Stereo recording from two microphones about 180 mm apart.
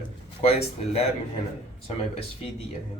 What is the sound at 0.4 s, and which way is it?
Speech, 35° left (ahead or behind).